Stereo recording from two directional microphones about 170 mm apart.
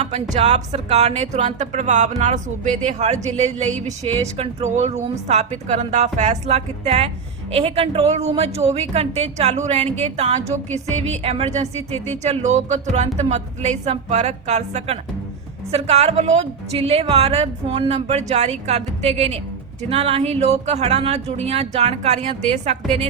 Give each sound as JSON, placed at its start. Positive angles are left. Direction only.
{"t": 0.0, "sound": "a woman's voice", "side_deg": -40}